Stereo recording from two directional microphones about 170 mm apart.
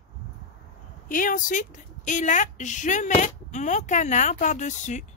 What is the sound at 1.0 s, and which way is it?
A woman's voice, 50° left (ahead or behind).